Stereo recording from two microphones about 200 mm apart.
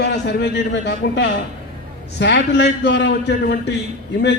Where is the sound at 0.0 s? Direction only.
60° left (ahead or behind).